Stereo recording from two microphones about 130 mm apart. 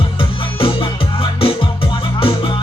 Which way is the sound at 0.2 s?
40° left (ahead or behind).